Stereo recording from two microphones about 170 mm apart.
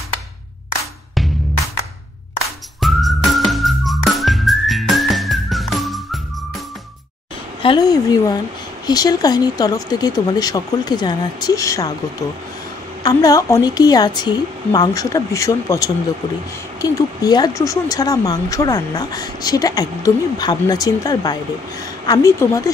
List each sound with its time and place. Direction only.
2.8 s whistling: centre (ahead or behind)
7.6 s a woman's voice: 25° left (ahead or behind)
13.0 s speech: 20° left (ahead or behind)